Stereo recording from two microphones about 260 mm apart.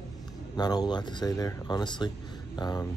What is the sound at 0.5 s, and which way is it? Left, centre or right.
Speech, centre.